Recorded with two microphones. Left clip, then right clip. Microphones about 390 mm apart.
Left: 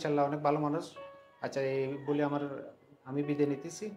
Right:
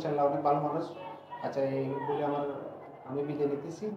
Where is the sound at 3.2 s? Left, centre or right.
Left.